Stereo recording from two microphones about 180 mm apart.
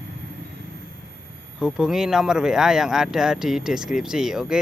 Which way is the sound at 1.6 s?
5° right (ahead or behind).